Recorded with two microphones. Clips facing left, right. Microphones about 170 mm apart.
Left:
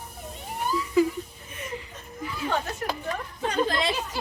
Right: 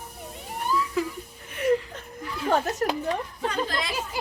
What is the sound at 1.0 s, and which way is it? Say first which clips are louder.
Wheeze: left 10 dB; centre (ahead or behind).